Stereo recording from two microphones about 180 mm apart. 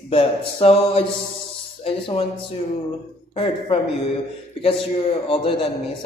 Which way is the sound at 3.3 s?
30° left (ahead or behind).